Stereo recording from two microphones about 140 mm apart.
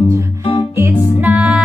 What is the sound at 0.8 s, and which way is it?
Music, 15° right (ahead or behind).